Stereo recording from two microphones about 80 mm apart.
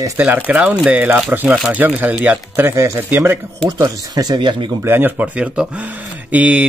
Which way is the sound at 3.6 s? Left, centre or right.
Right.